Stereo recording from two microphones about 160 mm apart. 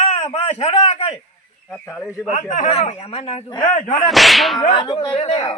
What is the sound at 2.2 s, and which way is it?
Speech, 55° left (ahead or behind).